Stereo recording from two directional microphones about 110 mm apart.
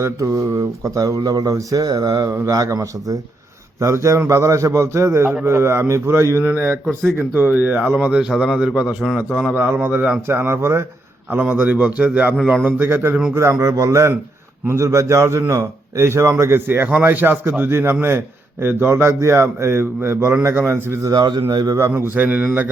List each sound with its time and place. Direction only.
0.0 s a man's voice: 30° right (ahead or behind)
12.4 s a man's voice: 5° left (ahead or behind)
12.6 s a man's voice: 20° right (ahead or behind)
21.1 s a man's voice: 40° right (ahead or behind); by 22.7 s 15° right (ahead or behind)